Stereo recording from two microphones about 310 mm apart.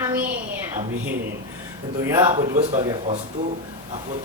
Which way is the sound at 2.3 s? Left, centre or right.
Right.